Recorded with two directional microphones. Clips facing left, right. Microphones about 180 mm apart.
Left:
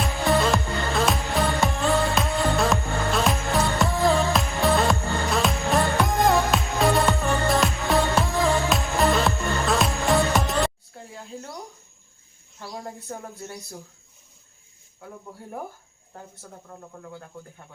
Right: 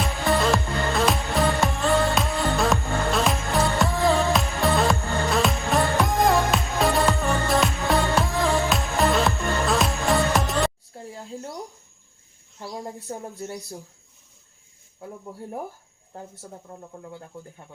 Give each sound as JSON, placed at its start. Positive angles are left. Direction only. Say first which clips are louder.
{"t": 0.0, "sound": "music", "louder": "left 1 dB", "side_deg": 0}
{"t": 10.9, "sound": "a sound", "louder": "right 3 dB", "side_deg": -30}
{"t": 13.1, "sound": "speech", "louder": "right 3 dB", "side_deg": -25}
{"t": 16.4, "sound": "speech", "louder": "right 2 dB", "side_deg": -20}